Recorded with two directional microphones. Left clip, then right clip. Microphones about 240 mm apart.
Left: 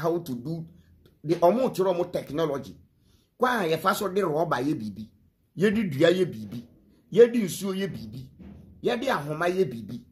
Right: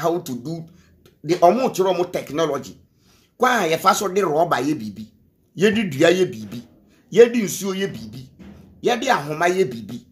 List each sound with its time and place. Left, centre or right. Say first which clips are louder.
0.0 s speech: right 6 dB; centre